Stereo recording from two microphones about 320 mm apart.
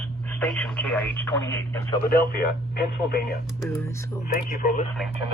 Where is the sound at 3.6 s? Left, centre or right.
Centre.